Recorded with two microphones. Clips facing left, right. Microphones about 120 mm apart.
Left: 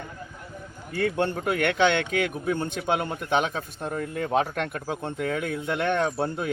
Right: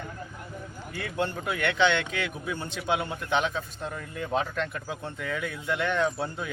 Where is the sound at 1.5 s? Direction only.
50° left (ahead or behind).